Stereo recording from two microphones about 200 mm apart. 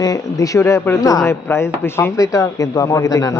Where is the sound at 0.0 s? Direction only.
15° left (ahead or behind).